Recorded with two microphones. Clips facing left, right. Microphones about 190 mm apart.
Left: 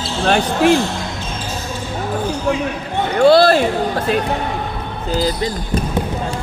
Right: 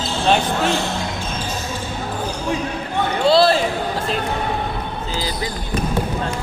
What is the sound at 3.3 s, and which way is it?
Basketball bounce, 55° left (ahead or behind).